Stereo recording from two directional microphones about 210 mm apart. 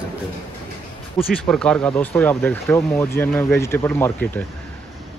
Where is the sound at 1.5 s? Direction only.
5° left (ahead or behind).